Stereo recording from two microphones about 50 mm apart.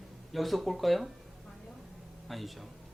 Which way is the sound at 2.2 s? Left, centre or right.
Centre.